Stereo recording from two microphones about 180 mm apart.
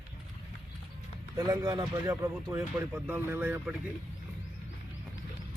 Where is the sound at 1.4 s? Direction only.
20° right (ahead or behind).